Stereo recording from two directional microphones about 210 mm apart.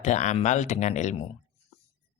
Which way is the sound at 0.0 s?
35° left (ahead or behind).